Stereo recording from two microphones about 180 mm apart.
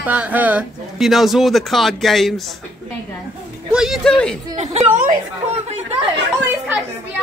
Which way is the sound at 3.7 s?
Centre (ahead or behind).